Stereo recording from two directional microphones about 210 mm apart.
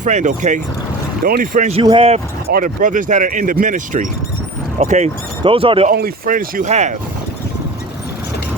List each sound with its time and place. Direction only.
0.0 s speech: 35° right (ahead or behind)
1.8 s speech: 25° right (ahead or behind)
2.5 s speech: 40° right (ahead or behind)
5.9 s speech: 45° right (ahead or behind)